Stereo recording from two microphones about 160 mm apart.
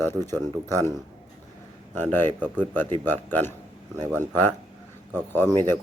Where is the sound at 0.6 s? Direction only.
15° left (ahead or behind).